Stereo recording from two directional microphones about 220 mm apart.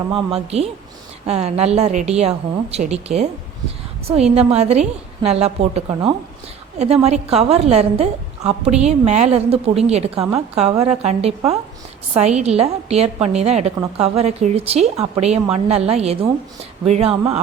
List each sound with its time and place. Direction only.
0.1 s speech: 25° right (ahead or behind)